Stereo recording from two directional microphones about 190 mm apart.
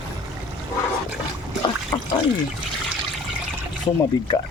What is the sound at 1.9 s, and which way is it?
Speech, 15° left (ahead or behind).